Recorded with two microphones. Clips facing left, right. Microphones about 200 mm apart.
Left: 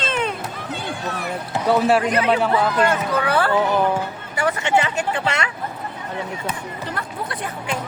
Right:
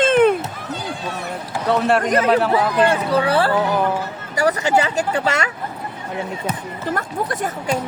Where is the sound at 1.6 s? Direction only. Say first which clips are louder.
Left 1 dB; 5° left (ahead or behind).